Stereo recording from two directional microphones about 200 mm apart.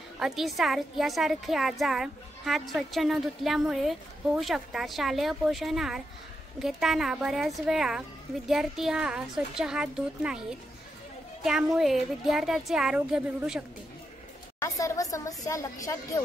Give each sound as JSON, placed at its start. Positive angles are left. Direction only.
{"t": 0.2, "sound": "a woman's voice", "side_deg": 0}
{"t": 14.6, "sound": "speech", "side_deg": 15}